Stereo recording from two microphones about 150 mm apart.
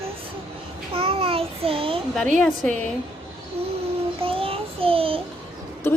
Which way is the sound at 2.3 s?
5° left (ahead or behind).